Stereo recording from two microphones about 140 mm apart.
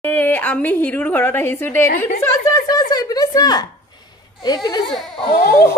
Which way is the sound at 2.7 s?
30° left (ahead or behind).